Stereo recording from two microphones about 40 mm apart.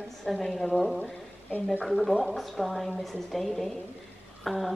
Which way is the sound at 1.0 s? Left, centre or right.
Left.